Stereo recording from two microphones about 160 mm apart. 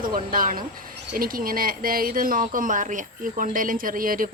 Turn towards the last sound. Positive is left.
turn(degrees=-60)  # may be behind; listen again after turning